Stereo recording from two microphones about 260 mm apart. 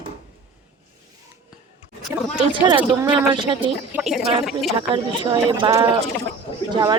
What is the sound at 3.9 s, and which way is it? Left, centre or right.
Speech, centre.